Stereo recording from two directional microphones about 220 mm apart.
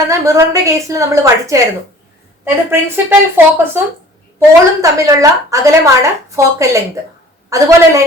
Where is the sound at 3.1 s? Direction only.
10° right (ahead or behind).